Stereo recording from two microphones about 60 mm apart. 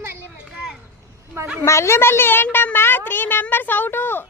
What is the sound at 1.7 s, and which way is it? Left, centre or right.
Speech, left.